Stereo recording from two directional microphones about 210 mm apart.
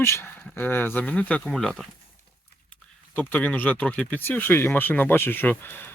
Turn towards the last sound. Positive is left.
turn(degrees=10)  # may be behind; listen again after turning